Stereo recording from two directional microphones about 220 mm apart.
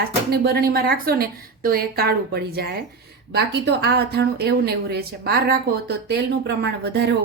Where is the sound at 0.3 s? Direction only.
45° right (ahead or behind).